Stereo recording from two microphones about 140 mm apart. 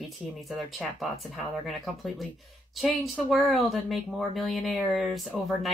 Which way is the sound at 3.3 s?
Centre (ahead or behind).